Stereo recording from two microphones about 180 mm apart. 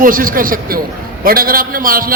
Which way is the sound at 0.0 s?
50° right (ahead or behind).